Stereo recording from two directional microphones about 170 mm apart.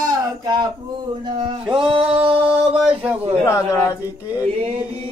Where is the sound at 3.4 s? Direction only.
20° left (ahead or behind).